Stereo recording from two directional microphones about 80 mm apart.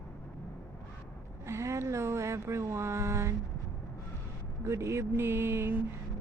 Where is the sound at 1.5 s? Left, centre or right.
Right.